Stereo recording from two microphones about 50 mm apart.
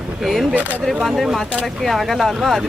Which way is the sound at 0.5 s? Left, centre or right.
Right.